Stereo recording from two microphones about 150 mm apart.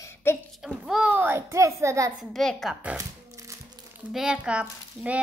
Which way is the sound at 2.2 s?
Centre (ahead or behind).